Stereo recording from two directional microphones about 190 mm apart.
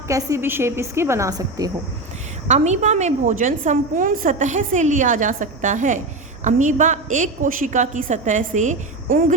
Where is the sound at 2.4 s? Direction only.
35° right (ahead or behind).